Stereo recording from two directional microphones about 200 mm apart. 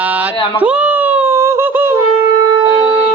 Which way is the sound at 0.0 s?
5° right (ahead or behind).